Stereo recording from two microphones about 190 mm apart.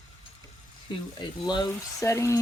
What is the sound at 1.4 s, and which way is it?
Speech, 20° left (ahead or behind).